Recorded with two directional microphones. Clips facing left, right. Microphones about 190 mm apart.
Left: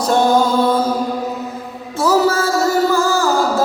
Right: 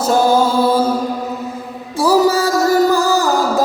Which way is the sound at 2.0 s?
15° right (ahead or behind).